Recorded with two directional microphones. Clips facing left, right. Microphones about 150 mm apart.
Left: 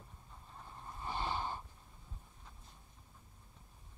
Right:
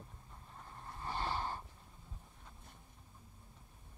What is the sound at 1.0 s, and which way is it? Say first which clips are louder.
Snort: even; 20° left (ahead or behind).